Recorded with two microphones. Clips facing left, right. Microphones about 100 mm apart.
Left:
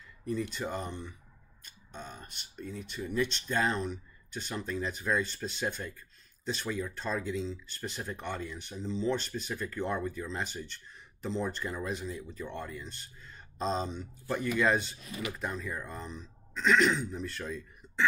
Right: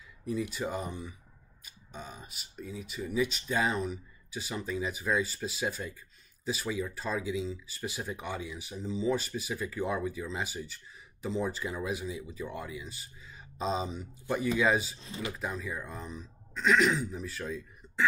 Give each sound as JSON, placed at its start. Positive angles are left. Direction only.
{"t": 0.2, "sound": "speech", "side_deg": -5}
{"t": 15.0, "sound": "speech", "side_deg": -25}
{"t": 15.3, "sound": "speech", "side_deg": 0}